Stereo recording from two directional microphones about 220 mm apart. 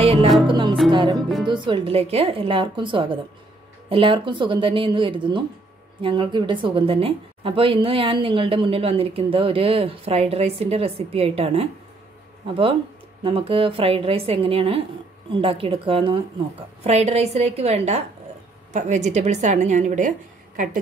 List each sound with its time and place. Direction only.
0.0 s music: 25° right (ahead or behind)
1.1 s speech: centre (ahead or behind)
1.5 s a woman's voice: 20° right (ahead or behind)
13.2 s a woman's voice: 25° right (ahead or behind)